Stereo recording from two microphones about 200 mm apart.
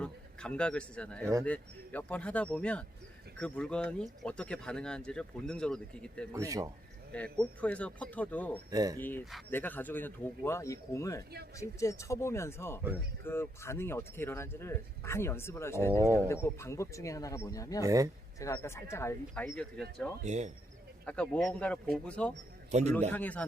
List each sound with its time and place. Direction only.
0.0 s a man's voice: 5° left (ahead or behind)
6.3 s speech: 15° right (ahead or behind)
7.1 s speech: 5° left (ahead or behind)
8.7 s speech: 20° right (ahead or behind)
9.0 s speech: 10° left (ahead or behind)
17.8 s speech: 15° right (ahead or behind)
18.3 s speech: 15° left (ahead or behind)
20.2 s speech: 35° right (ahead or behind)
21.1 s speech: 5° left (ahead or behind)
22.7 s speech: 35° right (ahead or behind)
23.1 s speech: 10° left (ahead or behind)